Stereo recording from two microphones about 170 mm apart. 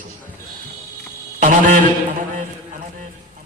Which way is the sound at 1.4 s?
50° right (ahead or behind).